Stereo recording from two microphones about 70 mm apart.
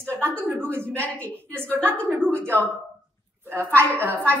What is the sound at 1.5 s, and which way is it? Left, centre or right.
A woman's voice, right.